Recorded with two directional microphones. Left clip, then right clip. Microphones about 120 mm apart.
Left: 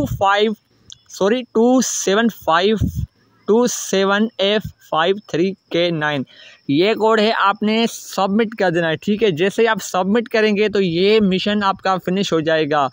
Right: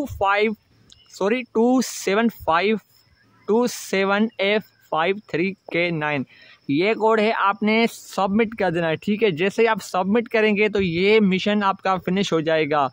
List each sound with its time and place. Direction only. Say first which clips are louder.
0.0 s speech: left 4 dB; 25° left (ahead or behind)